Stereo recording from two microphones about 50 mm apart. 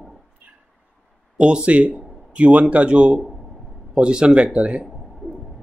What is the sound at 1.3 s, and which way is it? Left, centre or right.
Speech, centre.